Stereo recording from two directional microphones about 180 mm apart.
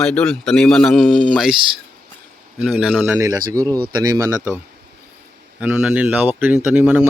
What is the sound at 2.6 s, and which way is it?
Speech, 5° right (ahead or behind).